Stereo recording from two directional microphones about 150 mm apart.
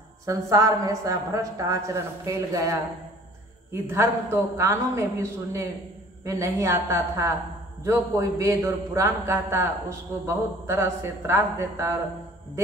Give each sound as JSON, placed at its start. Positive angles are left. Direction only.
{"t": 0.2, "sound": "a man's voice", "side_deg": -20}
{"t": 3.9, "sound": "a man's voice", "side_deg": -15}